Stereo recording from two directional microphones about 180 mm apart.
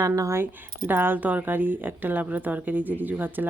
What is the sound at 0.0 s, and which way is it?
Speech, 15° right (ahead or behind).